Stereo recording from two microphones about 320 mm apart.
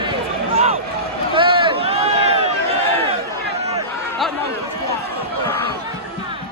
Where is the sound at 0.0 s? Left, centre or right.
Centre.